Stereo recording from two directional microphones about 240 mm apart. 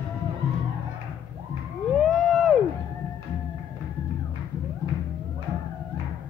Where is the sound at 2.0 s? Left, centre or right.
Centre.